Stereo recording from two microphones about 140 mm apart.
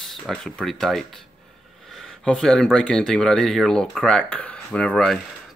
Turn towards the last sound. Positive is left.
turn(degrees=5)  # may be behind; listen again after turning